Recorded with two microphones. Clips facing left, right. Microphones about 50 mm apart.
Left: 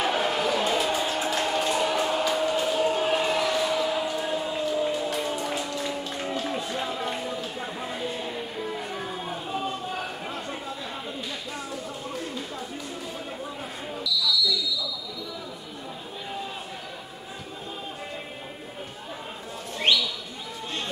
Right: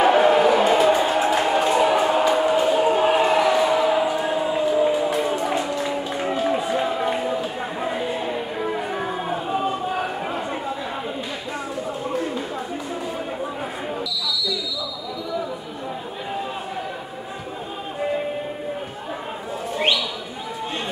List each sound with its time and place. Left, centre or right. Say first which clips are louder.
0.0 s music: right 10 dB; centre
14.2 s basketball bounce: left 4 dB; centre